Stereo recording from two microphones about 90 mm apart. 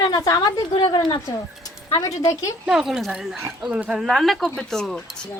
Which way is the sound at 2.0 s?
40° left (ahead or behind).